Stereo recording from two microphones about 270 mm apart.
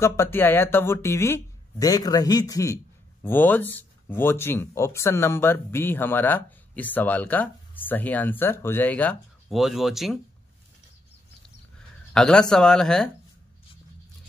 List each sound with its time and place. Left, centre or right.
0.0 s speech: centre
12.1 s speech: centre